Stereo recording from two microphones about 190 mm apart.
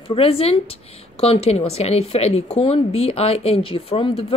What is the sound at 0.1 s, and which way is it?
A woman's voice, 30° left (ahead or behind).